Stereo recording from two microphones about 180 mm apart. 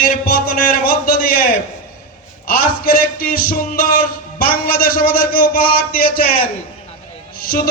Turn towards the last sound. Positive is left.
turn(degrees=55)  # may be behind; listen again after turning